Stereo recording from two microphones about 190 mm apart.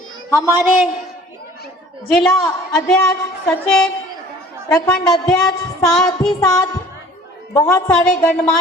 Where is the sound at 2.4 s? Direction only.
15° left (ahead or behind).